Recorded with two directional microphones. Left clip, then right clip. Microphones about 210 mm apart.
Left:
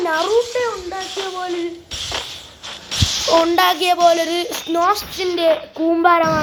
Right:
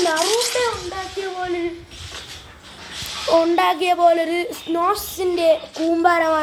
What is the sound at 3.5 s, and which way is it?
A woman's voice, centre (ahead or behind).